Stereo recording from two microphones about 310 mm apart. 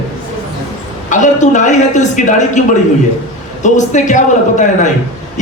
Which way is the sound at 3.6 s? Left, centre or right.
Left.